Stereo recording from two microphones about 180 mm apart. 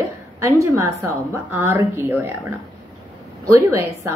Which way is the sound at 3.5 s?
15° right (ahead or behind).